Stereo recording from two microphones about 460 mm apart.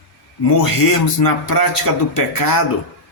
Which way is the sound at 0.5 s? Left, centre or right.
Left.